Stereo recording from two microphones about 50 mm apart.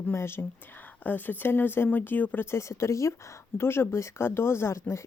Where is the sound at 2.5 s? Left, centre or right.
Left.